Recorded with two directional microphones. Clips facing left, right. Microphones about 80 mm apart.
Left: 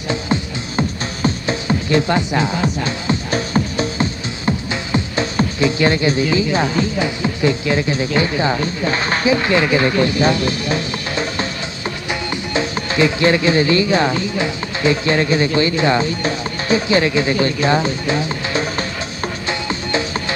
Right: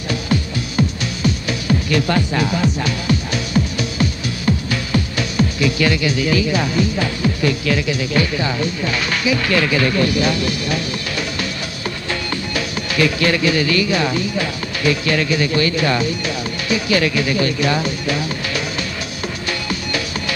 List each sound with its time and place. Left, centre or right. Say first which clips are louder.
0.1 s music: even; left